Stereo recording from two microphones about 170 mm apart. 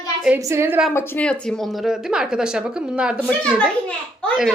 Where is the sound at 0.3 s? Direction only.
15° right (ahead or behind).